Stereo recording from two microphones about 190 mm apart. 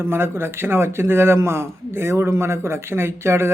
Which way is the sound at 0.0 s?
10° right (ahead or behind).